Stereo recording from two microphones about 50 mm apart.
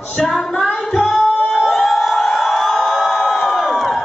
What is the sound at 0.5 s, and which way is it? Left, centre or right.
Music, centre.